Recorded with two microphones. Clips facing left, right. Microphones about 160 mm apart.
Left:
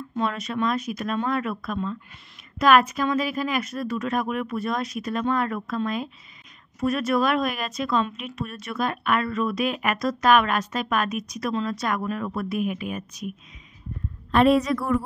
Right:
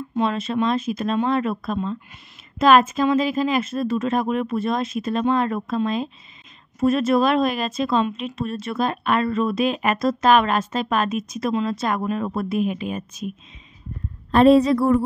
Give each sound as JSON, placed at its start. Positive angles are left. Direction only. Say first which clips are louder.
{"t": 0.2, "sound": "speech", "louder": "right 4 dB", "side_deg": -25}
{"t": 6.8, "sound": "speech", "louder": "right 5 dB", "side_deg": -25}
{"t": 14.3, "sound": "a woman's voice", "louder": "right 5 dB", "side_deg": -30}